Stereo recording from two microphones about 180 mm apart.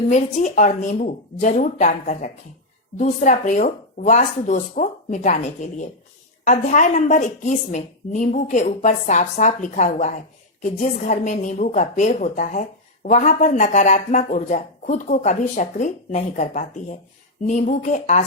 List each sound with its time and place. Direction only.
0.1 s a woman's voice: 45° left (ahead or behind)